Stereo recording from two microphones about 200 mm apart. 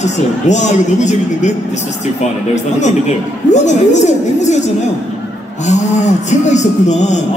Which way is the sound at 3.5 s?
35° left (ahead or behind).